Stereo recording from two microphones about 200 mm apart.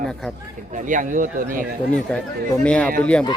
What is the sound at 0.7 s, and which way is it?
Speech, 40° right (ahead or behind).